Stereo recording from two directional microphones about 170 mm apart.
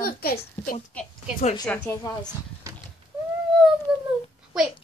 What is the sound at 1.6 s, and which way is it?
Speech, 15° left (ahead or behind).